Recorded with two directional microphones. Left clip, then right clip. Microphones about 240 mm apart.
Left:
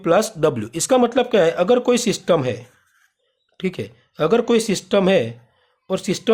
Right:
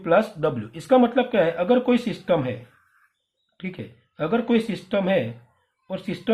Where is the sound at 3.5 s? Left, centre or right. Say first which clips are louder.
Left 10 dB; left.